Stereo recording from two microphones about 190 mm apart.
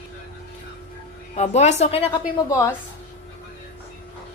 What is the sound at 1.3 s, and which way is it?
Speech, 35° left (ahead or behind).